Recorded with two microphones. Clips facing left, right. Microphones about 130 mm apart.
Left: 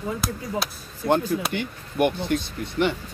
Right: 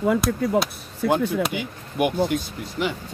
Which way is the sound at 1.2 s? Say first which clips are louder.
Right 3 dB; 65° right (ahead or behind).